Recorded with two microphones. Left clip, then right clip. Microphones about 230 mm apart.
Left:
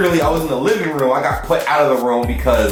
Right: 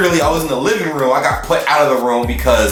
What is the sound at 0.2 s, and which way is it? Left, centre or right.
Speech, centre.